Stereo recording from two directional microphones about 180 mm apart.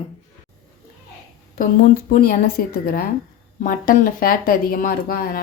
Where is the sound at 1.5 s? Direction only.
50° left (ahead or behind).